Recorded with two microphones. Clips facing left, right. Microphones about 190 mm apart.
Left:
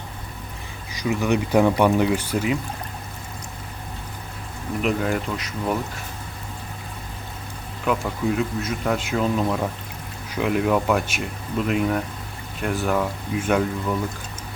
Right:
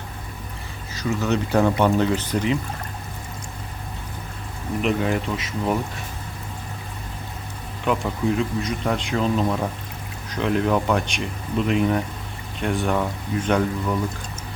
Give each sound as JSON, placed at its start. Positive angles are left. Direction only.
{"t": 0.9, "sound": "speech", "side_deg": 15}
{"t": 4.8, "sound": "speech", "side_deg": 0}
{"t": 7.9, "sound": "speech", "side_deg": 5}